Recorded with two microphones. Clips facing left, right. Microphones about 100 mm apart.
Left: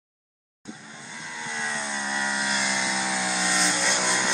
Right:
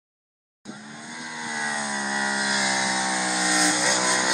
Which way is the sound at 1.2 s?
10° right (ahead or behind).